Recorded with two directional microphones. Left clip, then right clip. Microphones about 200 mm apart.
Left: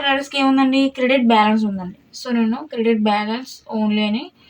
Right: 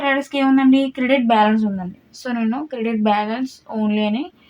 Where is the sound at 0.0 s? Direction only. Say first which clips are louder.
Left 1 dB; 50° right (ahead or behind).